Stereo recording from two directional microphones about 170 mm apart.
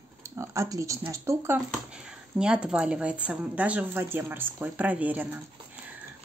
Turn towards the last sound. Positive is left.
turn(degrees=-10)  # may be behind; listen again after turning